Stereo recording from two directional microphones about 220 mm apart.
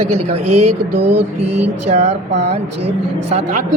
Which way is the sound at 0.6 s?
90° right.